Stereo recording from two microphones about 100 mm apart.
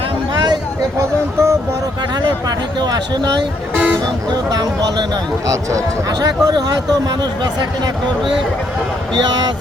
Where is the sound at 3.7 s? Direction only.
15° right (ahead or behind).